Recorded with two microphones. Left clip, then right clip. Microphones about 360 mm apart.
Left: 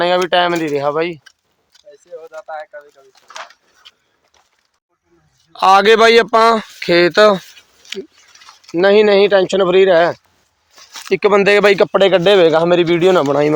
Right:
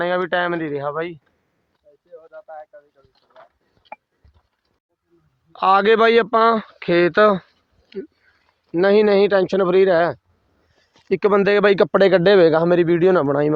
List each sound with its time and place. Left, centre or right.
0.0 s speech: right
2.1 s speech: centre
5.5 s speech: right
8.7 s speech: right